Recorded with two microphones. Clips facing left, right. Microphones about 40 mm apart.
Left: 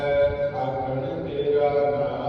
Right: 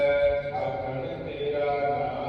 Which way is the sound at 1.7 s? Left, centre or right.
Right.